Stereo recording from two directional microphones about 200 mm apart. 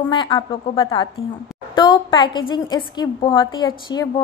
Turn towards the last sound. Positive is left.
turn(degrees=20)  # may be behind; listen again after turning